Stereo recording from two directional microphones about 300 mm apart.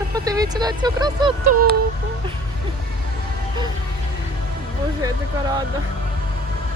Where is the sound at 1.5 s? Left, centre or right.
Right.